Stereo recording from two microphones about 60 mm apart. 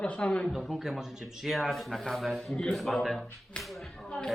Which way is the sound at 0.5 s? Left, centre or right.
Centre.